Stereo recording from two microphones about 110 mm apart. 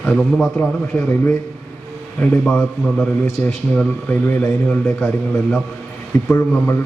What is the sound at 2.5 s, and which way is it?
A man's voice, 5° left (ahead or behind).